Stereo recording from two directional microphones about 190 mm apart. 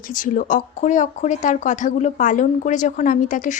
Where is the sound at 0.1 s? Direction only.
45° left (ahead or behind).